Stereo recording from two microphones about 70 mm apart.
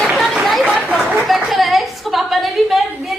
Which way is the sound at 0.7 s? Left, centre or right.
Right.